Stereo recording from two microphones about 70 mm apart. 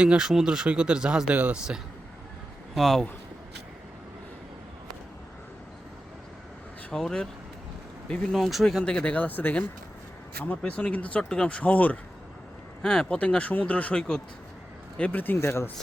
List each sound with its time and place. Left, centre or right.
0.0 s speech: centre
2.7 s speech: centre
6.9 s speech: centre
8.3 s speech: centre
8.8 s speech: centre
12.8 s speech: centre; by 15.7 s left